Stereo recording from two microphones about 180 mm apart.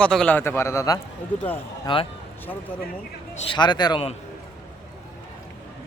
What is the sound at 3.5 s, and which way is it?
Speech, 25° left (ahead or behind).